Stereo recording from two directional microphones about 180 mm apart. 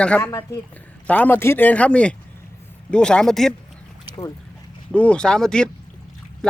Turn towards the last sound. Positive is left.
turn(degrees=5)  # may be behind; listen again after turning